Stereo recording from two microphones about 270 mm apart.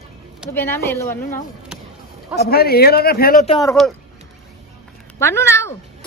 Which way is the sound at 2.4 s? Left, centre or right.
Left.